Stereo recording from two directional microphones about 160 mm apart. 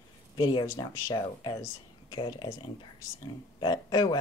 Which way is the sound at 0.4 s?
25° left (ahead or behind).